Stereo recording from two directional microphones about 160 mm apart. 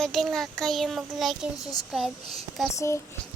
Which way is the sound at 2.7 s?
15° left (ahead or behind).